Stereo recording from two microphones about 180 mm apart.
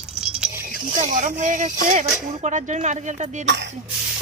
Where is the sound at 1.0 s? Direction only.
45° right (ahead or behind).